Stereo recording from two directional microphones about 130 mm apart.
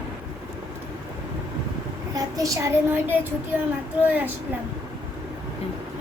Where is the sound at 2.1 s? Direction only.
25° right (ahead or behind).